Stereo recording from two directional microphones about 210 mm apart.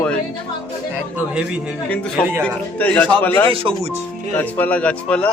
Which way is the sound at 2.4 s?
5° left (ahead or behind).